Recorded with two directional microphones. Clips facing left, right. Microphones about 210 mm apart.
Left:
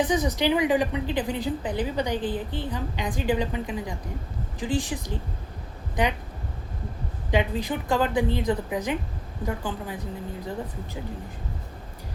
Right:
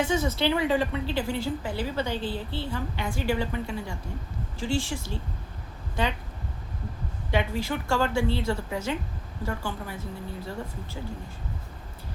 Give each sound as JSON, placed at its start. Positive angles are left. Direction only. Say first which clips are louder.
{"t": 0.0, "sound": "a woman's voice", "louder": "left 2 dB", "side_deg": 15}
{"t": 7.3, "sound": "a woman's voice", "louder": "left 2 dB", "side_deg": 15}